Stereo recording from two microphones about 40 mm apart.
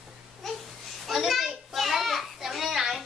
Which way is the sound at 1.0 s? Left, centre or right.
Centre.